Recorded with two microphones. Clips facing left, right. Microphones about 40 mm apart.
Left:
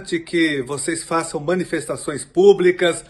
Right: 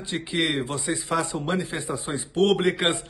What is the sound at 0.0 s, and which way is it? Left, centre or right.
A man's voice, right.